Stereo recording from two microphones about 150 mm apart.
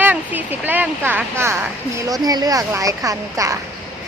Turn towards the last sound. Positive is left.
turn(degrees=-20)  # may be behind; listen again after turning